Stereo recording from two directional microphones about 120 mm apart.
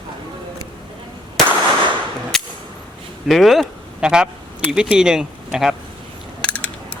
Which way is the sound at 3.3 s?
Centre (ahead or behind).